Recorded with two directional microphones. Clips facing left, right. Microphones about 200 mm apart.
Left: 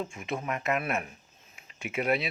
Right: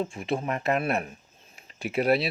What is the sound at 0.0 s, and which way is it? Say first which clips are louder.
Speech: right 5 dB; 35° right (ahead or behind).